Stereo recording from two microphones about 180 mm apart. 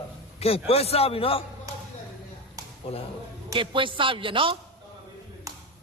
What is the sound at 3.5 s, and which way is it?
A man's voice, 25° right (ahead or behind).